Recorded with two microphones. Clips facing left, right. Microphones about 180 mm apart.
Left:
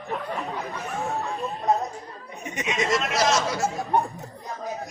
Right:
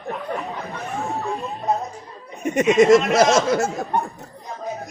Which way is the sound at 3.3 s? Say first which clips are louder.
Right 6 dB; 50° right (ahead or behind).